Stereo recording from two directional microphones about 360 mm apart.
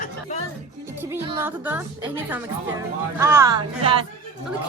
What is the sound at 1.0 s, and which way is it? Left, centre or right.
A woman's voice, centre.